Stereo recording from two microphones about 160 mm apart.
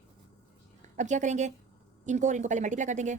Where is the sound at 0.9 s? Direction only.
50° right (ahead or behind).